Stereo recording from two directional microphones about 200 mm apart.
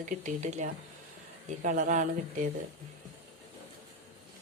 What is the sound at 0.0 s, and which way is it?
Speech, 40° right (ahead or behind).